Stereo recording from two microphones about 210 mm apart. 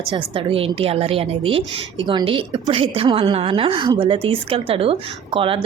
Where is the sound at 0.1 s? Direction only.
25° right (ahead or behind).